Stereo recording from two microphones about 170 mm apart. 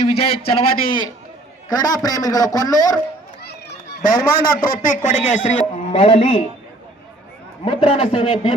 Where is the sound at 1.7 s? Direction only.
20° left (ahead or behind).